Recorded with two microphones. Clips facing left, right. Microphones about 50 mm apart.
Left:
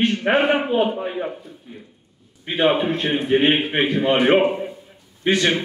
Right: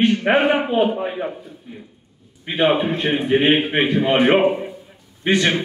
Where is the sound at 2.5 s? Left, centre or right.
Centre.